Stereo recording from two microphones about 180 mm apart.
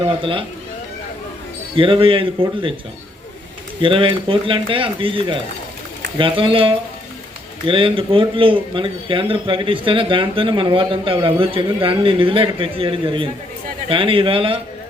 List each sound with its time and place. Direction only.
0.2 s a man's voice: 30° right (ahead or behind)
1.7 s a man's voice: 30° right (ahead or behind)
3.8 s a man's voice: 30° right (ahead or behind)